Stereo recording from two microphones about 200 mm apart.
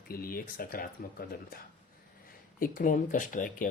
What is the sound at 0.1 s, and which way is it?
Speech, 45° left (ahead or behind).